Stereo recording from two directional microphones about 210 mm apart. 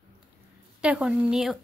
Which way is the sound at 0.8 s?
5° right (ahead or behind).